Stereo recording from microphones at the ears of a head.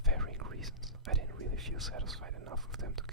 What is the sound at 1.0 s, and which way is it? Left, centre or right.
Whispering, right.